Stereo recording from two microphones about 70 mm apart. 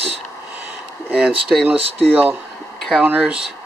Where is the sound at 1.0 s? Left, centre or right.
Centre.